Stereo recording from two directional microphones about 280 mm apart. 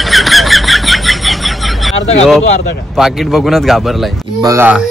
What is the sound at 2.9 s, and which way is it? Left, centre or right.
Speech, centre.